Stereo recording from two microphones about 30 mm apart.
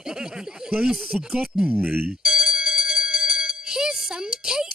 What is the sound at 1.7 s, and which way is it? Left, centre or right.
Speech, right.